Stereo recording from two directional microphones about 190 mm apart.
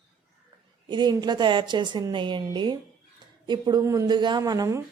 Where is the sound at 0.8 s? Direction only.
25° right (ahead or behind).